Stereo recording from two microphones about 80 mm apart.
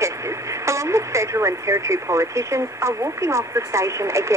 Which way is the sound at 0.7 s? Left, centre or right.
Right.